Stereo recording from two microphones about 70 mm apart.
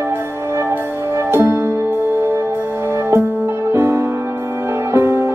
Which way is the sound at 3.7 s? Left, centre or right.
Right.